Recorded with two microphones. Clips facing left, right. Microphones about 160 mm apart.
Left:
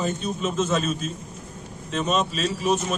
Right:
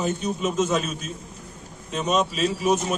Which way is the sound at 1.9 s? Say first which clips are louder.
Right 1 dB; 10° right (ahead or behind).